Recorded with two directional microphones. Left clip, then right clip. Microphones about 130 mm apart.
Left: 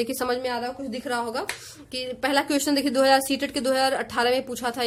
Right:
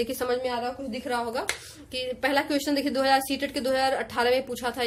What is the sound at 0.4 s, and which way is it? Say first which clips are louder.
A woman's voice: left 1 dB; 50° left (ahead or behind).